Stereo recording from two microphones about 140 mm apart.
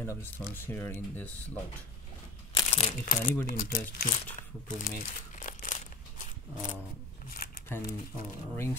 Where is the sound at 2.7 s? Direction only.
45° left (ahead or behind).